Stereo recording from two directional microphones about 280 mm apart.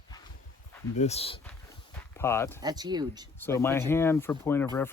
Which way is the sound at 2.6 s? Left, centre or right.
Centre.